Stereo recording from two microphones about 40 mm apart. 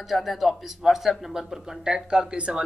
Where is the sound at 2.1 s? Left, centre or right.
Right.